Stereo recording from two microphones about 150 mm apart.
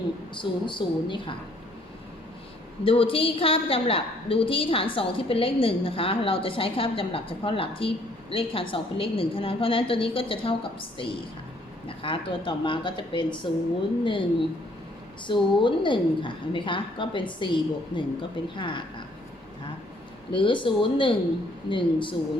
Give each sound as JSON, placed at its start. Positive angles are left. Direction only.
{"t": 0.3, "sound": "a woman's voice", "side_deg": 35}
{"t": 2.8, "sound": "a woman's voice", "side_deg": 40}
{"t": 15.3, "sound": "a woman's voice", "side_deg": 35}
{"t": 20.3, "sound": "a woman's voice", "side_deg": 35}